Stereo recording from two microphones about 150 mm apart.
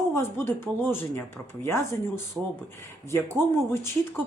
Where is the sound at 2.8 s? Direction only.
20° left (ahead or behind).